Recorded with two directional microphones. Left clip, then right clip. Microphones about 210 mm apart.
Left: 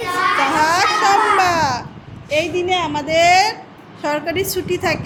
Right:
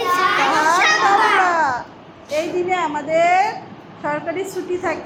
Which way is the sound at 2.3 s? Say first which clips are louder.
Left 2 dB; 30° left (ahead or behind).